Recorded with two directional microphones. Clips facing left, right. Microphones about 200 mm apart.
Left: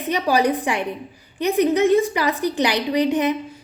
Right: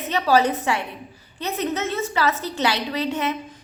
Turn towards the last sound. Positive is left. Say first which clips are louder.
# left 5 dB
turn(degrees=15)  # may be behind; listen again after turning